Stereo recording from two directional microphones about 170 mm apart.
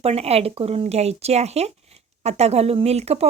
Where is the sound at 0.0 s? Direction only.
35° right (ahead or behind).